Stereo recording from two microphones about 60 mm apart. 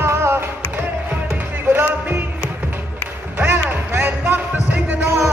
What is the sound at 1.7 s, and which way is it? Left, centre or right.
Music, right.